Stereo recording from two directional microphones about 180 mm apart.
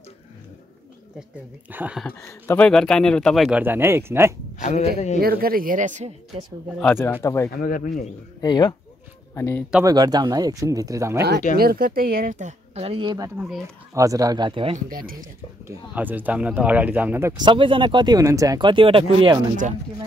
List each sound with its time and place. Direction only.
1.7 s speech: 10° right (ahead or behind)
2.0 s speech: 15° left (ahead or behind); by 4.3 s 15° right (ahead or behind)
4.6 s speech: 40° left (ahead or behind)
5.2 s speech: 55° right (ahead or behind); by 6.4 s 40° right (ahead or behind)
6.8 s speech: 10° left (ahead or behind)
7.5 s speech: 50° left (ahead or behind)
8.4 s speech: 25° left (ahead or behind)
9.8 s speech: 20° right (ahead or behind)
11.5 s speech: 55° right (ahead or behind); by 14.8 s 30° right (ahead or behind)
14.9 s speech: 50° right (ahead or behind)
15.6 s speech: 10° right (ahead or behind)
17.4 s speech: 25° right (ahead or behind)